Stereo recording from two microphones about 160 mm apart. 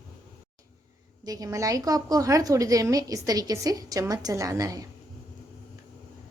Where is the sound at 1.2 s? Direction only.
20° right (ahead or behind).